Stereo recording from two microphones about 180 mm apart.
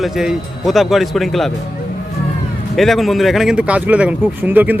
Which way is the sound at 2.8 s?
Centre (ahead or behind).